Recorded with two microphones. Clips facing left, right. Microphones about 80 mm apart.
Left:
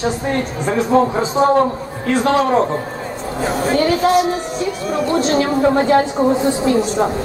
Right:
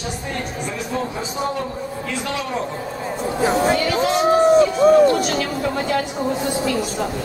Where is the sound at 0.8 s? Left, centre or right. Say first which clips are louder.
Left 13 dB; left.